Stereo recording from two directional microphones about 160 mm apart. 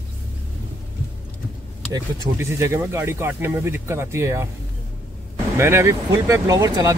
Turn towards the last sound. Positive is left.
turn(degrees=-20)  # may be behind; listen again after turning